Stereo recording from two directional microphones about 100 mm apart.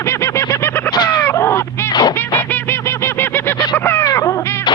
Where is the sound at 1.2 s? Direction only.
25° left (ahead or behind).